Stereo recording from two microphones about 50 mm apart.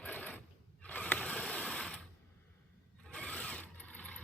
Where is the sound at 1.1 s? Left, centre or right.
Left.